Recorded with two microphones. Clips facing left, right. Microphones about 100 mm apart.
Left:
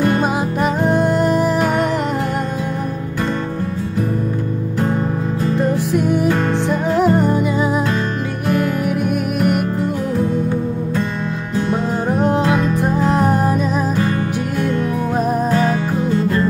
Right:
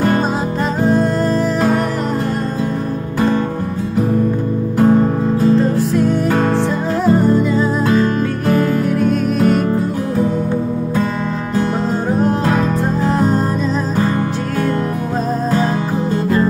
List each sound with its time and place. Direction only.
0.8 s music: 15° left (ahead or behind)
5.6 s music: 15° left (ahead or behind)
8.8 s music: 15° left (ahead or behind)
13.0 s music: 15° left (ahead or behind)